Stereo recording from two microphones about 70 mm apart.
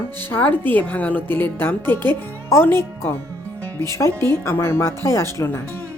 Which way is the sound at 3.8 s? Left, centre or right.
Left.